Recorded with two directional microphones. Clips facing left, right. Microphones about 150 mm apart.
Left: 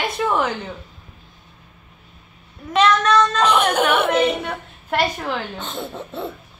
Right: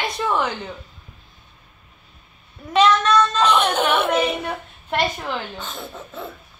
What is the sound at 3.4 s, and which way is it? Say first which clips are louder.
Speech: left 1 dB; 10° left (ahead or behind).